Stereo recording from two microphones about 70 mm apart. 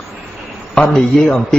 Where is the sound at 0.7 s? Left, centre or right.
Centre.